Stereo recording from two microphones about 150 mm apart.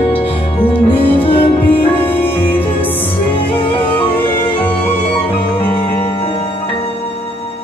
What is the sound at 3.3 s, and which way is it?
Music, 35° left (ahead or behind).